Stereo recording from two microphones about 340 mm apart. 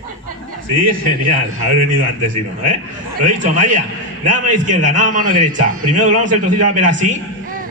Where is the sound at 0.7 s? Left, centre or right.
Right.